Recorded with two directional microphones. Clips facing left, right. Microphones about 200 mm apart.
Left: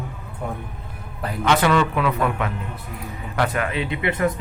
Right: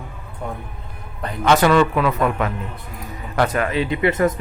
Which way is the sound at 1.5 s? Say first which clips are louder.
Right 4 dB; 40° right (ahead or behind).